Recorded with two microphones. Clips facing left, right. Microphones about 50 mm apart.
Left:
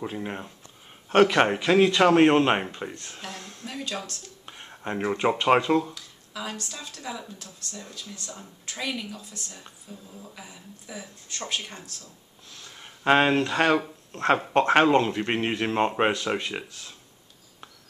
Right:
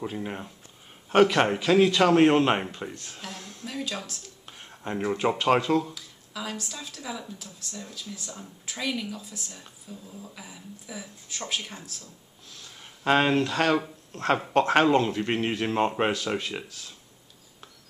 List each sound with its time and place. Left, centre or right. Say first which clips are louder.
0.0 s speech: left 1 dB; centre
2.9 s speech: left 1 dB; left
3.2 s a sound: left 1 dB; centre
3.9 s speech: left 2 dB; centre
4.5 s speech: left 1 dB; centre
12.6 s speech: left 3 dB; centre